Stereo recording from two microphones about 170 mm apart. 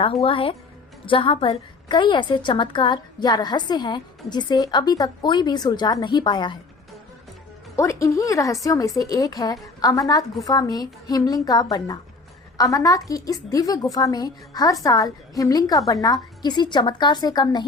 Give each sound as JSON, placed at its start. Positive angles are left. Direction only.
{"t": 0.0, "sound": "a woman's voice", "side_deg": 35}
{"t": 7.8, "sound": "a woman's voice", "side_deg": 20}